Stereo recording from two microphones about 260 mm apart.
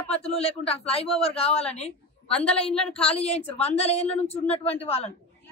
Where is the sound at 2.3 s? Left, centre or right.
Centre.